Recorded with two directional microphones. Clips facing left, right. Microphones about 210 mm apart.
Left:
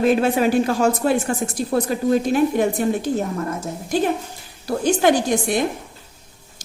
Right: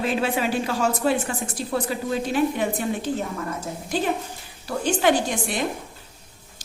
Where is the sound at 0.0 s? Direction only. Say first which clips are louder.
Left 7 dB; 45° left (ahead or behind).